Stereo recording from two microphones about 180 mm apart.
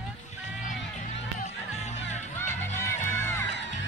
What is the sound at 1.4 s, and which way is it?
Music, 40° left (ahead or behind).